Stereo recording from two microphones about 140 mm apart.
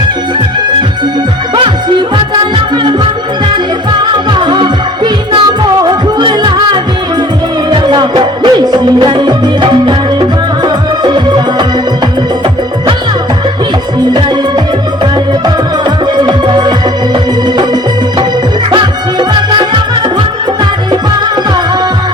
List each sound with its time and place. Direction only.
4.3 s music: 35° right (ahead or behind)
7.7 s music: 35° right (ahead or behind)
16.1 s music: 35° right (ahead or behind)
19.3 s music: 30° right (ahead or behind)